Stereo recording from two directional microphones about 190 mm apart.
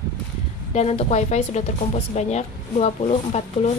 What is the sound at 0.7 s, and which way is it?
Speech, 35° left (ahead or behind).